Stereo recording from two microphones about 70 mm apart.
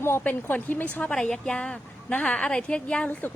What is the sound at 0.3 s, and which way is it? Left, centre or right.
Speech, left.